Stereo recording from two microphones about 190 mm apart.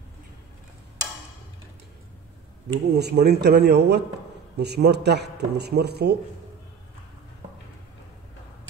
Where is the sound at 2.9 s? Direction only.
60° right (ahead or behind).